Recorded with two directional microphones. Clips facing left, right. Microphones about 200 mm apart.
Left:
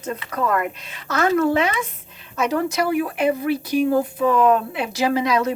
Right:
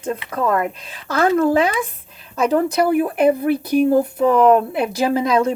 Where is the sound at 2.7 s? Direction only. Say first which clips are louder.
Right 4 dB; 50° right (ahead or behind).